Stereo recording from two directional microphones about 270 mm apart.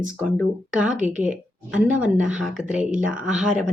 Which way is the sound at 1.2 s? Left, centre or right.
Centre.